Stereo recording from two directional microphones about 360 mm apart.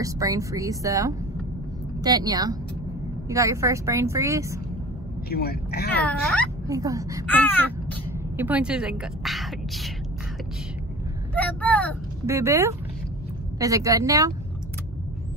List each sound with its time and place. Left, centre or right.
0.0 s speech: centre
5.3 s speech: left
6.7 s speech: centre
7.2 s a woman's voice: centre
11.3 s vehicle: centre
12.3 s speech: centre